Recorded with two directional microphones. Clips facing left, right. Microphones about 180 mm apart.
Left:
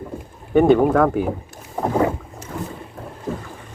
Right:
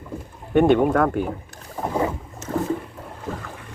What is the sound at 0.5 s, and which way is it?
Speech, centre (ahead or behind).